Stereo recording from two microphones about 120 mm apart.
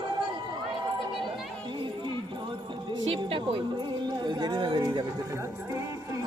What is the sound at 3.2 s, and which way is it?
Speech, 45° right (ahead or behind).